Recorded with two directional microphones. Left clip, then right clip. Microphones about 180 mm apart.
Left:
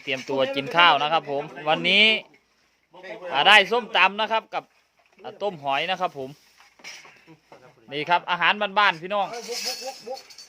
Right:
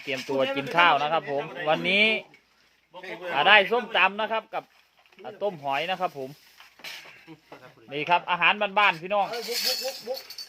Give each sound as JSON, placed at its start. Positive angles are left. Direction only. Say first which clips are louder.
{"t": 0.0, "sound": "speech", "louder": "left 2 dB", "side_deg": 15}
{"t": 3.3, "sound": "speech", "louder": "left 3 dB", "side_deg": 15}
{"t": 7.3, "sound": "speech", "louder": "right 4 dB", "side_deg": -65}
{"t": 7.9, "sound": "speech", "louder": "left 1 dB", "side_deg": 15}